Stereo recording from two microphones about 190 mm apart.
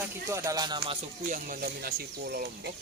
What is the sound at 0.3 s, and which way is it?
Speech, 15° right (ahead or behind).